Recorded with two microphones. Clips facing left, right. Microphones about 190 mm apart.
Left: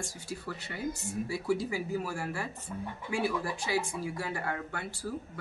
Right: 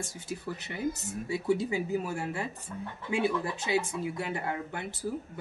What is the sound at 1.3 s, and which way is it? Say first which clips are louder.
Speech: right 4 dB; 20° right (ahead or behind).